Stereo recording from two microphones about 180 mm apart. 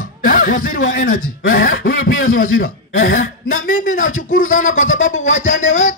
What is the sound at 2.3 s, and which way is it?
A man's voice, 50° left (ahead or behind).